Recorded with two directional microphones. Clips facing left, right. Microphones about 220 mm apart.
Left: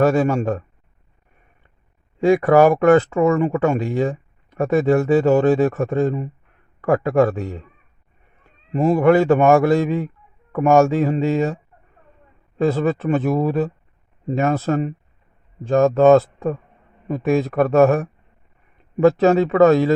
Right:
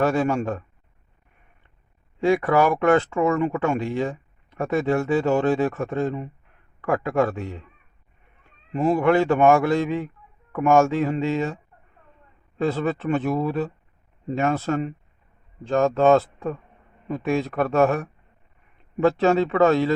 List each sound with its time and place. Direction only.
0.0 s a man's voice: 40° left (ahead or behind)
2.2 s a man's voice: 40° left (ahead or behind)
8.7 s a man's voice: 40° left (ahead or behind)
12.5 s a man's voice: 40° left (ahead or behind)